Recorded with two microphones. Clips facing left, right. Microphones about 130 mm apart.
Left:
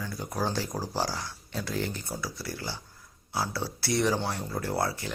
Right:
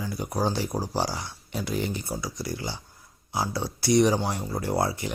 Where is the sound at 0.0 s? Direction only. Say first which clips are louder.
Right 4 dB; 10° right (ahead or behind).